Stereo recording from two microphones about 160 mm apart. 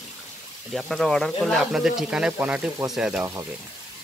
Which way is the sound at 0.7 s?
Centre (ahead or behind).